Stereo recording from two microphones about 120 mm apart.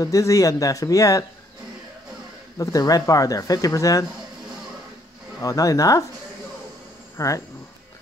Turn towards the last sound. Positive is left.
turn(degrees=25)  # may be behind; listen again after turning